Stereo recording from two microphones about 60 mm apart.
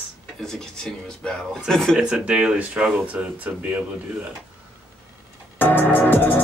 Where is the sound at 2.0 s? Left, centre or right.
Centre.